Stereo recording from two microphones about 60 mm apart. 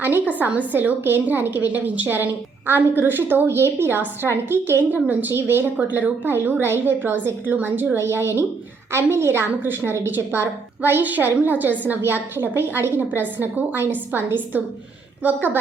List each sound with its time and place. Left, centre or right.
0.3 s a woman's voice: right
3.4 s a woman's voice: right
5.9 s a woman's voice: right